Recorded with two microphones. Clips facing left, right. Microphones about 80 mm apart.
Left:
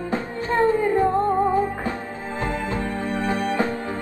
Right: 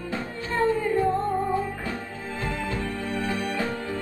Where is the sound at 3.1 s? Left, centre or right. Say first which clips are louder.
Left 6 dB; left.